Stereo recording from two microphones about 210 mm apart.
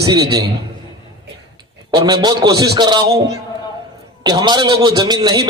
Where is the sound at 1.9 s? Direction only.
20° right (ahead or behind).